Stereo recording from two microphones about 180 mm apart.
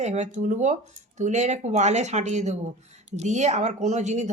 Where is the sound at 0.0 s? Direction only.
40° right (ahead or behind).